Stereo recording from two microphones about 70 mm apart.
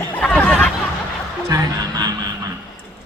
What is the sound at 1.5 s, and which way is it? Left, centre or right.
Music, right.